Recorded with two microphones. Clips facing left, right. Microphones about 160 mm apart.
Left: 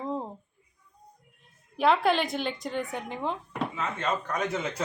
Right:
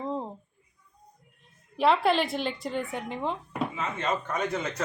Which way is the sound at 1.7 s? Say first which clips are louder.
Even; centre (ahead or behind).